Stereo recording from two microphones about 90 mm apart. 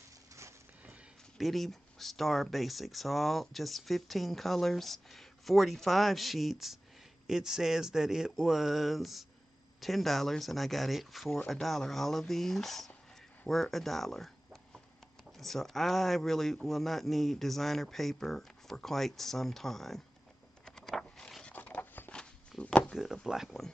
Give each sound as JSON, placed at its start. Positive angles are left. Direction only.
{"t": 1.4, "sound": "speech", "side_deg": 0}
{"t": 20.6, "sound": "vehicle", "side_deg": 5}
{"t": 21.5, "sound": "a sound", "side_deg": 20}
{"t": 22.1, "sound": "walk", "side_deg": 10}
{"t": 22.9, "sound": "speech", "side_deg": -5}